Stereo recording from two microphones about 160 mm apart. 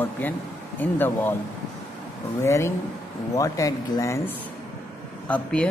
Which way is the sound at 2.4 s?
15° left (ahead or behind).